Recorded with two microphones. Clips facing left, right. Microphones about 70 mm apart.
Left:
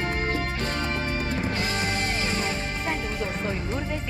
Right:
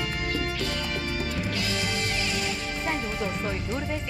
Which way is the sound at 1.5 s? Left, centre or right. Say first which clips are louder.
Left 2 dB; left.